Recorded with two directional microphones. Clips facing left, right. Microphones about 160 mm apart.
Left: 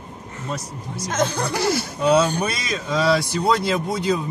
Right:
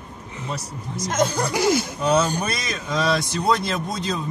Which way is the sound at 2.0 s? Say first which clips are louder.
Left 7 dB; 10° left (ahead or behind).